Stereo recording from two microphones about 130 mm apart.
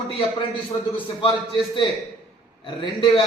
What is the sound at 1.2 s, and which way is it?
A man's voice, 40° left (ahead or behind).